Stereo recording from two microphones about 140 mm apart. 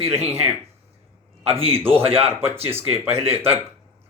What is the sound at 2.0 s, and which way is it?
Speech, 45° right (ahead or behind).